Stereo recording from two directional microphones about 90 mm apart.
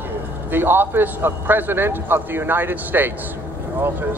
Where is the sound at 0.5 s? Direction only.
25° right (ahead or behind).